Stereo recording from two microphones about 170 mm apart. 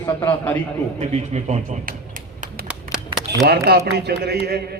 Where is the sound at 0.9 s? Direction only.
40° right (ahead or behind).